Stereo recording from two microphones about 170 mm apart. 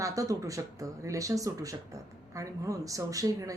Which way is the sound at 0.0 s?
20° right (ahead or behind).